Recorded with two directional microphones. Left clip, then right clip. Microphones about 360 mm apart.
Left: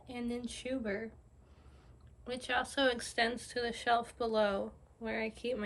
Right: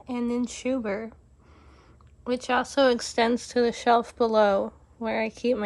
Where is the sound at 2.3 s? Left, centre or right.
Centre.